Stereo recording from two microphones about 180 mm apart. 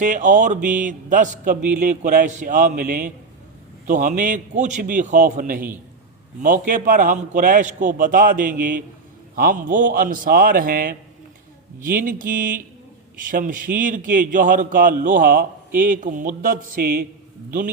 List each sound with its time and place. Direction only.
0.0 s a man's voice: 45° right (ahead or behind)